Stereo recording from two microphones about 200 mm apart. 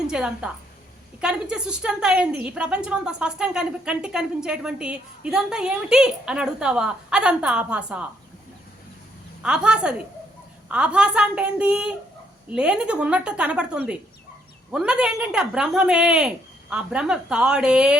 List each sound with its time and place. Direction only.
0.1 s a woman's voice: 5° right (ahead or behind)
9.4 s a woman's voice: 5° right (ahead or behind)